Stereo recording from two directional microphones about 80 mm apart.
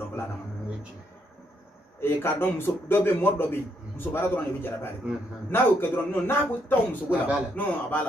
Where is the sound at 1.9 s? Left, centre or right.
Left.